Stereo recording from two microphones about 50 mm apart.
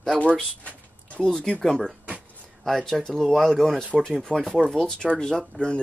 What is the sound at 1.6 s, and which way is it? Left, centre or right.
Speech, centre.